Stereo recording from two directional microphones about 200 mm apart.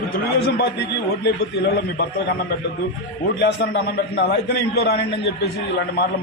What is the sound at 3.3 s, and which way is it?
A man's voice, 55° left (ahead or behind).